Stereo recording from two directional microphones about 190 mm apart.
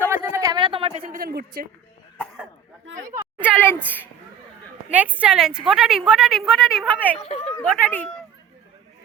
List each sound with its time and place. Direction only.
0.1 s a sound: 15° right (ahead or behind); by 1.0 s 30° right (ahead or behind)
1.0 s a woman's voice: 50° right (ahead or behind)
2.9 s a sound: 10° right (ahead or behind)
3.6 s speech: 10° left (ahead or behind)
4.9 s a woman's voice: 10° right (ahead or behind)
7.2 s speech: 30° left (ahead or behind)
7.5 s speech: 10° left (ahead or behind)